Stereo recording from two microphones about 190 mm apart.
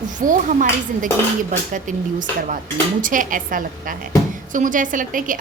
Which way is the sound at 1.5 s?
45° right (ahead or behind).